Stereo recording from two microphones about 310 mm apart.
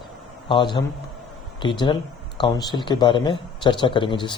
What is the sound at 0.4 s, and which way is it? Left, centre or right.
A man's voice, centre.